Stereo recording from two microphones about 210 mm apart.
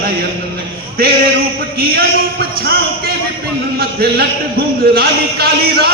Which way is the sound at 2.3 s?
50° right (ahead or behind).